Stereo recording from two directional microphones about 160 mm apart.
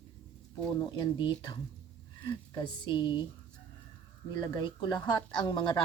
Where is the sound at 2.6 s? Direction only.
30° left (ahead or behind).